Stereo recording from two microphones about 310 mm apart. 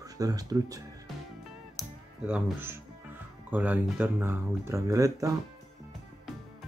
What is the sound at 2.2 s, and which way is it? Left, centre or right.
Speech, centre.